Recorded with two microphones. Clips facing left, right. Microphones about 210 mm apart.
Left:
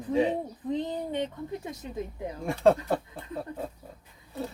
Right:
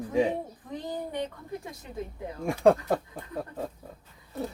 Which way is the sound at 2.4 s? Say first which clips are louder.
Right 1 dB; 15° right (ahead or behind).